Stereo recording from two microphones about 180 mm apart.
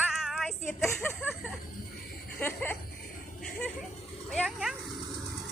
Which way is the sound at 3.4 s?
Centre (ahead or behind).